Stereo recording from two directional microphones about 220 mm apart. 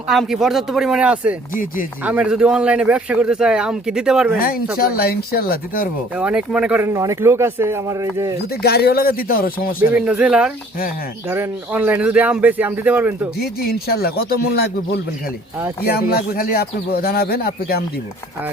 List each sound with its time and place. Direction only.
0.1 s speech: centre (ahead or behind)
1.5 s speech: 40° left (ahead or behind)
2.0 s speech: 5° right (ahead or behind)
4.4 s speech: 40° left (ahead or behind)
6.1 s speech: 5° right (ahead or behind)
8.6 s speech: 45° left (ahead or behind)
9.9 s speech: 5° right (ahead or behind)
13.4 s speech: 45° left (ahead or behind)